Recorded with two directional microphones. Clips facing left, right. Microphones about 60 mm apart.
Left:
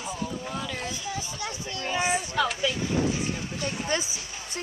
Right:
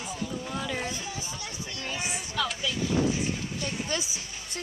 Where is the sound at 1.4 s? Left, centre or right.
Left.